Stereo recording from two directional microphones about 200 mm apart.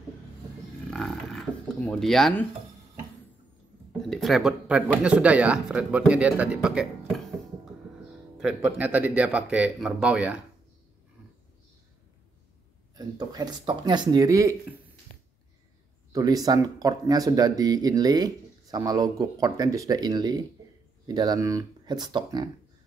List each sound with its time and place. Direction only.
0.8 s a sound: 5° left (ahead or behind)
4.1 s speech: centre (ahead or behind)
8.4 s speech: 5° right (ahead or behind)
12.9 s speech: 20° right (ahead or behind)
16.1 s speech: 20° right (ahead or behind)